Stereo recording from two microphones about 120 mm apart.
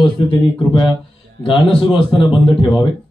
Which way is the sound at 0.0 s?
45° left (ahead or behind).